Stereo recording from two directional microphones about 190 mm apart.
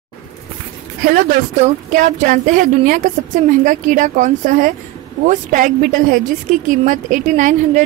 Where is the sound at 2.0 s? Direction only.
45° right (ahead or behind).